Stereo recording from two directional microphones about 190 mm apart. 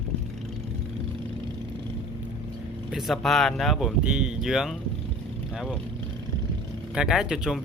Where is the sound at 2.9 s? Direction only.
Centre (ahead or behind).